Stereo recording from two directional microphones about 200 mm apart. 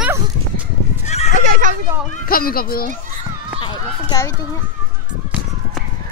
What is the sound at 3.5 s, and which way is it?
Run, 20° left (ahead or behind).